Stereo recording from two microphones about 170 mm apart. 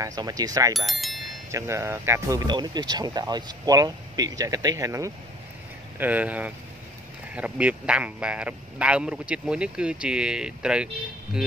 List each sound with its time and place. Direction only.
0.0 s speech: 20° right (ahead or behind)
0.7 s speech: centre (ahead or behind)
1.5 s speech: 15° right (ahead or behind)